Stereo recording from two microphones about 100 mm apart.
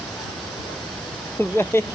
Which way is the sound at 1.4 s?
20° left (ahead or behind).